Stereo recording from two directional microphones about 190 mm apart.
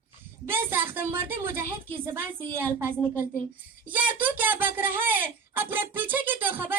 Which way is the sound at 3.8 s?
10° right (ahead or behind).